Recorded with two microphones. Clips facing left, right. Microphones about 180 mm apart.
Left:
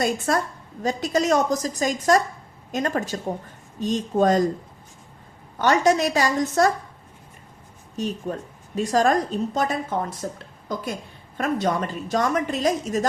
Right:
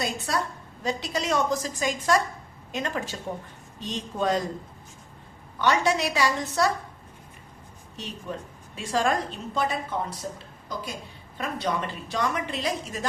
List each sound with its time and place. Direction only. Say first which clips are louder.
0.0 s a woman's voice: left 6 dB; 50° left (ahead or behind)
5.5 s a woman's voice: left 5 dB; 45° left (ahead or behind)
7.9 s a woman's voice: left 8 dB; 45° left (ahead or behind)